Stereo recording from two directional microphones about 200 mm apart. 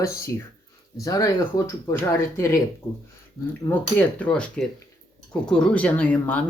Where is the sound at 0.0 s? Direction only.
15° left (ahead or behind).